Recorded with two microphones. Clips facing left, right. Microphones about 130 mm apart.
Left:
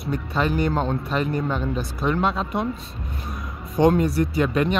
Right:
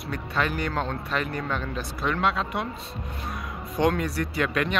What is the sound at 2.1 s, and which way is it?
Speech, 35° left (ahead or behind).